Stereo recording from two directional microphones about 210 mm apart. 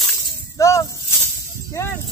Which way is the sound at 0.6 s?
15° left (ahead or behind).